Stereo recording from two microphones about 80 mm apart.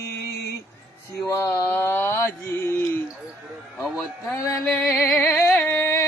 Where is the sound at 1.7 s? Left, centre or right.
Left.